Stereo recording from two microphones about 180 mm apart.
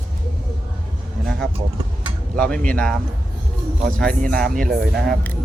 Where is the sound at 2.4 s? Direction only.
5° left (ahead or behind).